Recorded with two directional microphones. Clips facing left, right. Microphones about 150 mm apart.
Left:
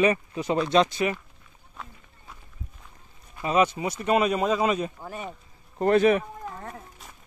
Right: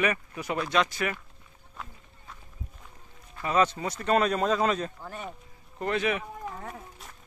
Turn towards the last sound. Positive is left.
turn(degrees=0)  # may be behind; listen again after turning